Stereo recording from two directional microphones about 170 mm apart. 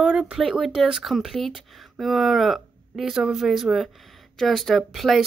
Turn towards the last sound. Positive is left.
turn(degrees=0)  # may be behind; listen again after turning